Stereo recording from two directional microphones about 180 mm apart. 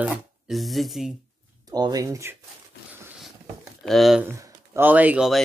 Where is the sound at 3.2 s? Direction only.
Centre (ahead or behind).